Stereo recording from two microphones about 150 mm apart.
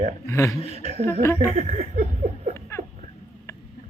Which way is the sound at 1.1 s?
15° left (ahead or behind).